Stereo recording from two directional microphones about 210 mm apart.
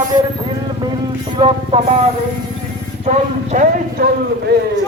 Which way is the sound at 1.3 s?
25° right (ahead or behind).